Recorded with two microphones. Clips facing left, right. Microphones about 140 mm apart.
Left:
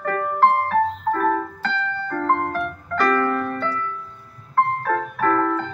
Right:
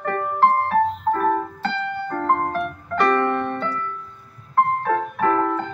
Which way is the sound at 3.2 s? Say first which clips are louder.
Right 1 dB; 25° right (ahead or behind).